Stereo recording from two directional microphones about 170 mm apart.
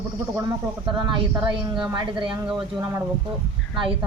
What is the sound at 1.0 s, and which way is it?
A woman's voice, 25° right (ahead or behind).